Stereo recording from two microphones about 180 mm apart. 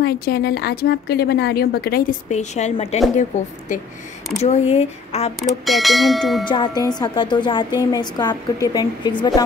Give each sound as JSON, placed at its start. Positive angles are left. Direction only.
{"t": 0.0, "sound": "a woman's voice", "side_deg": 60}
{"t": 5.7, "sound": "speech", "side_deg": 0}
{"t": 6.4, "sound": "a woman's voice", "side_deg": 25}